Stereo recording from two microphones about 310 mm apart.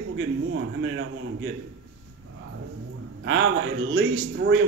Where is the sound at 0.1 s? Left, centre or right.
Right.